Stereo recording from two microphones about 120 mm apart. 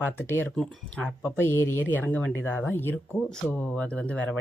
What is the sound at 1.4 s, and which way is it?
Speech, 20° left (ahead or behind).